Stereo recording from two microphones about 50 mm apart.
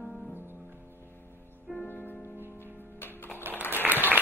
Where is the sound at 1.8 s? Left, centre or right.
Left.